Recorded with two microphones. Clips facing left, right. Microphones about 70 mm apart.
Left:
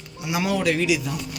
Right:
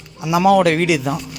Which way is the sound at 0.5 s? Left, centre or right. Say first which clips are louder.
Right 7 dB; right.